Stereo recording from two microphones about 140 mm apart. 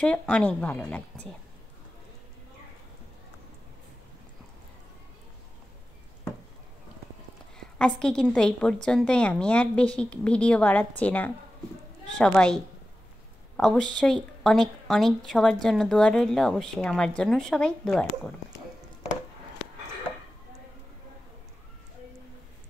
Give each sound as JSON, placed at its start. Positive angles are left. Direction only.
{"t": 0.0, "sound": "a woman's voice", "side_deg": 10}
{"t": 7.5, "sound": "a woman's voice", "side_deg": 5}
{"t": 13.6, "sound": "a woman's voice", "side_deg": 5}